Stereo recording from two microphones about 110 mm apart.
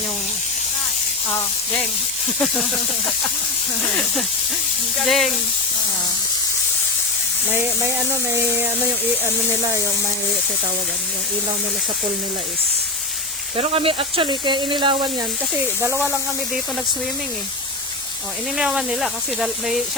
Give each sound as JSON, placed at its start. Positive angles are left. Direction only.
{"t": 5.0, "sound": "speech", "side_deg": 0}
{"t": 7.5, "sound": "speech", "side_deg": -25}
{"t": 13.6, "sound": "speech", "side_deg": -55}
{"t": 18.5, "sound": "speech", "side_deg": -5}